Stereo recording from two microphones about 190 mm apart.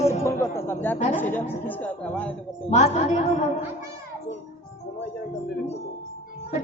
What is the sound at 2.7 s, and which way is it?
Speech, 35° left (ahead or behind).